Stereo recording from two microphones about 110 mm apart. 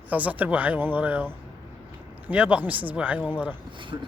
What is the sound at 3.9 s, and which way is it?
Speech, 30° right (ahead or behind).